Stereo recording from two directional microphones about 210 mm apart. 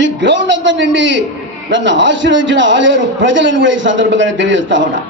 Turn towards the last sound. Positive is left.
turn(degrees=-60)  # may be behind; listen again after turning